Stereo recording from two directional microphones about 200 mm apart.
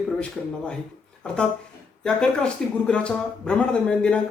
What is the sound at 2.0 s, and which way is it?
Speech, 5° left (ahead or behind).